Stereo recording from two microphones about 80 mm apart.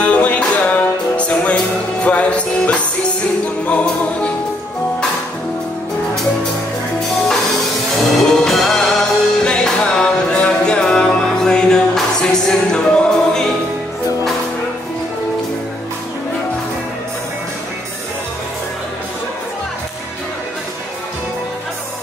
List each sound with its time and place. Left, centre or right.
0.0 s music: centre
8.2 s music: centre